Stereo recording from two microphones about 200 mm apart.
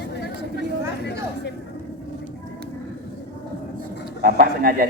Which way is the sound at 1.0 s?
60° left (ahead or behind).